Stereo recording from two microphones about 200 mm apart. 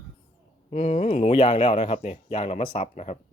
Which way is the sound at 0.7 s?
35° left (ahead or behind).